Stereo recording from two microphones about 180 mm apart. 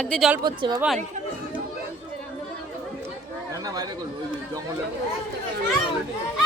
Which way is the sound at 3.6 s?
20° right (ahead or behind).